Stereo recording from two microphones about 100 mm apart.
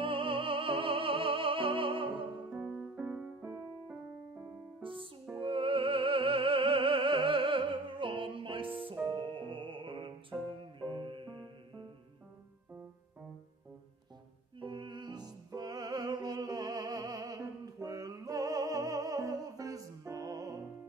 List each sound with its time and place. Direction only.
0.0 s music: 60° right (ahead or behind)
2.5 s music: 10° right (ahead or behind)
4.8 s music: 60° right (ahead or behind)
14.6 s music: 55° right (ahead or behind); by 20.6 s 35° right (ahead or behind)